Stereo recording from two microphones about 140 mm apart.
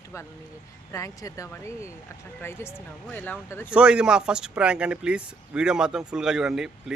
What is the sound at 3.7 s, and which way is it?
Speech, 5° right (ahead or behind).